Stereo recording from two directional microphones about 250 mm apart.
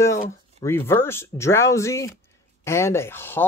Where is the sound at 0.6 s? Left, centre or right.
Centre.